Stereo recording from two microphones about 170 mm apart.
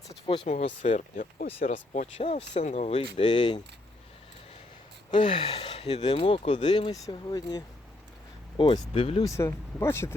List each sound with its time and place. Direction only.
0.1 s speech: 35° left (ahead or behind)
3.2 s speech: 25° left (ahead or behind)
5.1 s speech: 30° left (ahead or behind)
6.7 s speech: 25° left (ahead or behind)
9.2 s speech: 20° left (ahead or behind)